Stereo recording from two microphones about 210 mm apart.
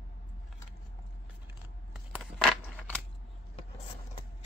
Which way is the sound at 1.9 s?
Centre (ahead or behind).